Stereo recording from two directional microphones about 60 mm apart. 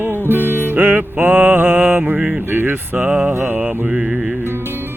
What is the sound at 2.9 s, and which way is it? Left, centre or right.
Music, centre.